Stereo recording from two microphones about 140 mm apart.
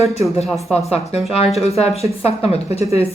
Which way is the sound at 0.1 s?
50° left (ahead or behind).